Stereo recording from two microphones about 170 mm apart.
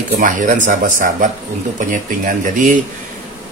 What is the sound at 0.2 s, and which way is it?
Speech, 50° right (ahead or behind).